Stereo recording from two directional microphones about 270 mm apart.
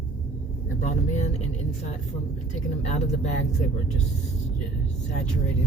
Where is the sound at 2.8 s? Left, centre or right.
Left.